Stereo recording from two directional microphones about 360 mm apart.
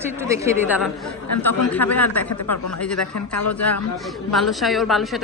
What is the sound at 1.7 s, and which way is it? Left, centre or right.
A woman's voice, centre.